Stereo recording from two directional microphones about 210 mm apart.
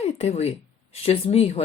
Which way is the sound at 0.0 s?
30° left (ahead or behind).